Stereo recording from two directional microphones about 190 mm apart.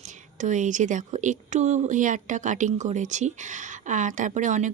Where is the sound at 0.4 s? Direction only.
40° right (ahead or behind).